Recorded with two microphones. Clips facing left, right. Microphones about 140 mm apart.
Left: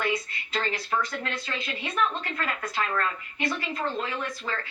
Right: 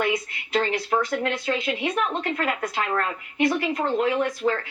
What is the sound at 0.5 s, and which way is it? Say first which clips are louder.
A woman's voice: right 6 dB; 15° right (ahead or behind).